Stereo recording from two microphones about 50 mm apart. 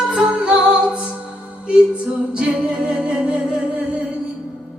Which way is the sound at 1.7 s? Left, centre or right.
Centre.